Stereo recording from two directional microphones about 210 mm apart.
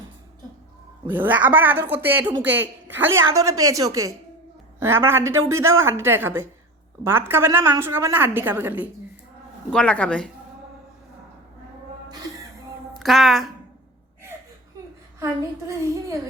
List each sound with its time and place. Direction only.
1.0 s a woman's voice: 10° right (ahead or behind)
9.6 s speech: 5° left (ahead or behind)
12.9 s a woman's voice: centre (ahead or behind)
15.2 s a woman's voice: 15° right (ahead or behind)